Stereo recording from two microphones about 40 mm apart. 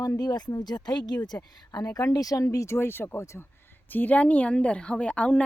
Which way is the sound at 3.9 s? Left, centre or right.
Left.